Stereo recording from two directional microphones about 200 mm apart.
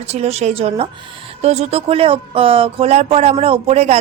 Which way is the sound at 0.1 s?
30° right (ahead or behind).